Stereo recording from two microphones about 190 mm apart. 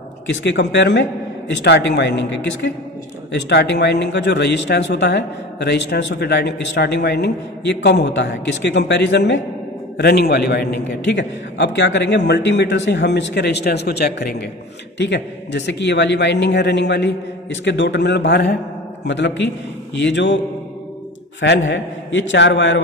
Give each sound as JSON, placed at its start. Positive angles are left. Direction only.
{"t": 0.3, "sound": "a man's voice", "side_deg": 70}
{"t": 21.4, "sound": "a man's voice", "side_deg": 75}